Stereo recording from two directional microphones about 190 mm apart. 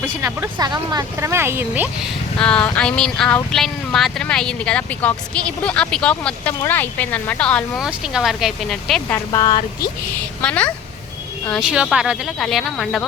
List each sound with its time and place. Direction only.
0.0 s speech: 15° right (ahead or behind)
2.4 s speech: 5° left (ahead or behind)
9.1 s speech: 15° left (ahead or behind)
10.4 s speech: 5° left (ahead or behind)